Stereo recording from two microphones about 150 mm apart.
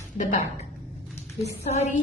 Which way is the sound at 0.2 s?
55° left (ahead or behind).